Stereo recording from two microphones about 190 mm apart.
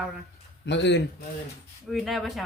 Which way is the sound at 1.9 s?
Centre (ahead or behind).